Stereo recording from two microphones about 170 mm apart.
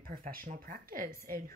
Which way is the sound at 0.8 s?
55° right (ahead or behind).